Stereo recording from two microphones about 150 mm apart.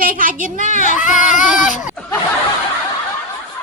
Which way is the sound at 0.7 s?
55° left (ahead or behind).